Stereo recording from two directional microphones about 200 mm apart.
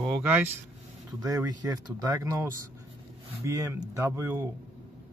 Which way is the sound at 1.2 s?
20° right (ahead or behind).